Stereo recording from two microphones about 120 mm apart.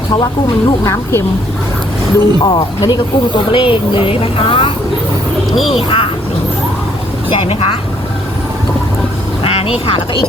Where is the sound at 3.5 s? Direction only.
45° left (ahead or behind).